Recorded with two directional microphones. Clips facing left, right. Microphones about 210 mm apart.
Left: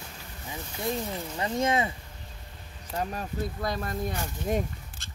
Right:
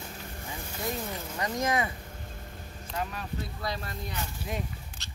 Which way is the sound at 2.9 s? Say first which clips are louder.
Left 3 dB; 45° left (ahead or behind).